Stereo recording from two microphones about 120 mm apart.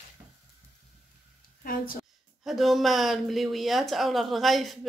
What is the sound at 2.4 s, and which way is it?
Speech, centre (ahead or behind).